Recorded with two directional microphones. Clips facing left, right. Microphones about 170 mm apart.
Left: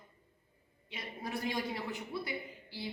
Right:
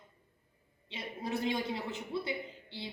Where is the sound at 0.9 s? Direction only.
25° right (ahead or behind).